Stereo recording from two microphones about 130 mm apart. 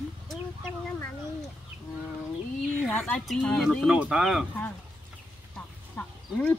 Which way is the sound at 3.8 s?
5° right (ahead or behind).